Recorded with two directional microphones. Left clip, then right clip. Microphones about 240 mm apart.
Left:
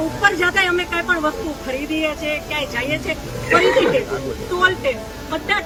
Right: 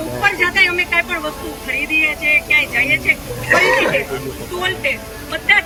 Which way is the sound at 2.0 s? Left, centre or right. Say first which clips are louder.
Right 7 dB; centre.